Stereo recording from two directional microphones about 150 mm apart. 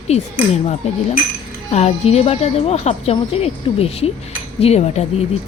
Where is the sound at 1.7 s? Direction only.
45° left (ahead or behind).